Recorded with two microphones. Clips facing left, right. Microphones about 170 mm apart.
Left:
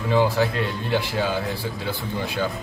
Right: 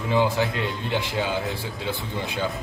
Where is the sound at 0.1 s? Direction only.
20° right (ahead or behind).